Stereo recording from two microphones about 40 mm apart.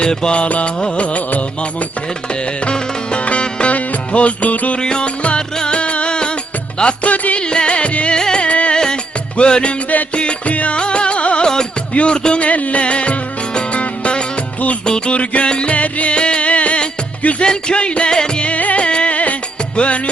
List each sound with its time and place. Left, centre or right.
0.0 s music: left
2.6 s music: left
4.8 s music: left
7.0 s music: left
7.4 s music: left
8.4 s music: left
8.7 s music: centre; by 10.8 s left
10.8 s music: left
12.4 s music: left
17.4 s music: left
18.4 s music: left